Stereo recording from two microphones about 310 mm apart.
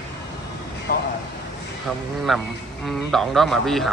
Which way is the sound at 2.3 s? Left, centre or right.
Centre.